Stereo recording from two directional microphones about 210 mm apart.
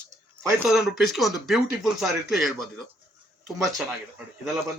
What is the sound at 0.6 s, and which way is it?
A woman's voice, centre (ahead or behind).